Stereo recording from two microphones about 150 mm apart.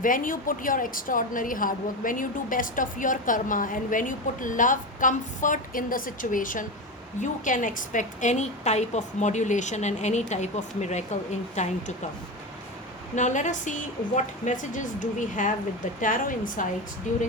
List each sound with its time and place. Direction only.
0.0 s a woman's voice: 65° left (ahead or behind)
13.1 s a woman's voice: 55° left (ahead or behind)